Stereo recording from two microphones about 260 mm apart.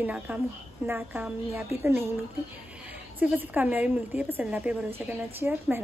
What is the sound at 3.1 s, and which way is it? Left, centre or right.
Speech, centre.